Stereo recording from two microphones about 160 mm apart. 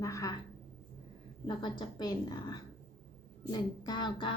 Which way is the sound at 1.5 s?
30° left (ahead or behind).